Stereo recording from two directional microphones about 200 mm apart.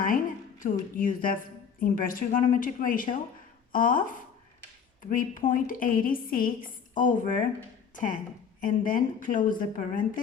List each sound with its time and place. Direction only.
0.6 s a woman's voice: 40° left (ahead or behind)